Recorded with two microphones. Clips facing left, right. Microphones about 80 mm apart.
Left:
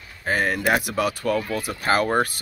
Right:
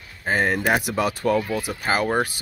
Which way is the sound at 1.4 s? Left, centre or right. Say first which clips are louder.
Even; centre.